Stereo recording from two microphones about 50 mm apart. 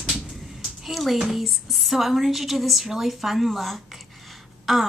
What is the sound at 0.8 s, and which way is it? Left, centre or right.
A woman's voice, centre.